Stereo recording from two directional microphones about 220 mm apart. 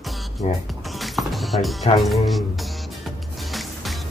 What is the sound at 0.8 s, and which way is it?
Music, centre (ahead or behind).